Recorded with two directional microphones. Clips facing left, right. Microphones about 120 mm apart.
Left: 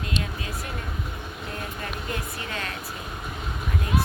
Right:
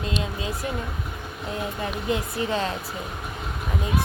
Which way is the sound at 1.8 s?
25° right (ahead or behind).